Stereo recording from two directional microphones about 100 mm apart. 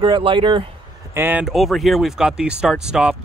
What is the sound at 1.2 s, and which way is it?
Speech, 20° right (ahead or behind).